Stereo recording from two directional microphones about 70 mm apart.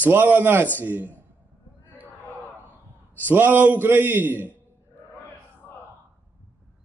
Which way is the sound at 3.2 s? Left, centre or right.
Right.